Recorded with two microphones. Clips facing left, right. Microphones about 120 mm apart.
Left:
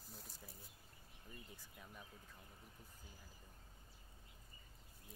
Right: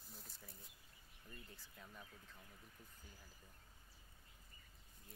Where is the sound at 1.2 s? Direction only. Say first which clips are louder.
Left 1 dB; 15° left (ahead or behind).